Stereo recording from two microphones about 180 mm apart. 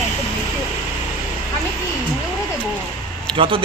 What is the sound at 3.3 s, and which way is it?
Speech, 30° right (ahead or behind).